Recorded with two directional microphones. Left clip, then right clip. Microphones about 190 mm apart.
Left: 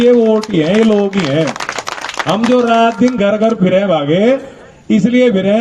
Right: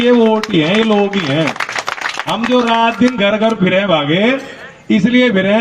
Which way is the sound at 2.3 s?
65° left (ahead or behind).